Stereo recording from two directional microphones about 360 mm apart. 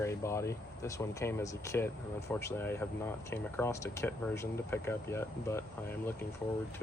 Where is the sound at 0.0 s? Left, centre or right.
Centre.